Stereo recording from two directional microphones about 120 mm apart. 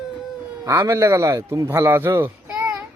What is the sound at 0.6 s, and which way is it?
A man's voice, 25° right (ahead or behind).